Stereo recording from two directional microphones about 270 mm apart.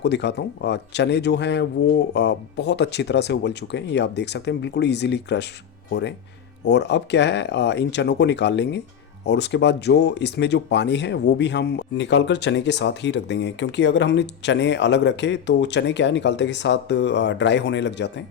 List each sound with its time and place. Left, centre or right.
0.0 s speech: left